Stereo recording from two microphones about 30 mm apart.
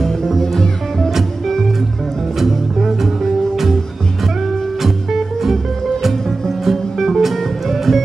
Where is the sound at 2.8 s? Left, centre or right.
Centre.